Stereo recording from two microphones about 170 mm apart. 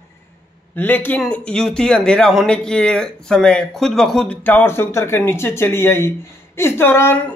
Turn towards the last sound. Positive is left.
turn(degrees=15)  # may be behind; listen again after turning